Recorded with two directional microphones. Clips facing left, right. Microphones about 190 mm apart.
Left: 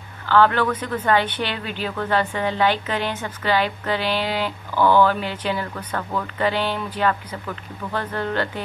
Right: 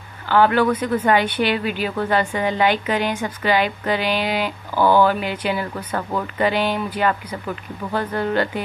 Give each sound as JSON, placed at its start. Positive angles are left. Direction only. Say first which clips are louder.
{"t": 0.3, "sound": "speech", "louder": "right 2 dB", "side_deg": -10}